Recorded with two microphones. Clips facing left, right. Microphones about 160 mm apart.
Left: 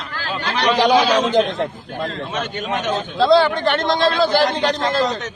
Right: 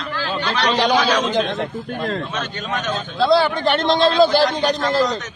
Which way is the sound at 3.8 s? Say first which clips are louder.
Right 5 dB; 20° right (ahead or behind).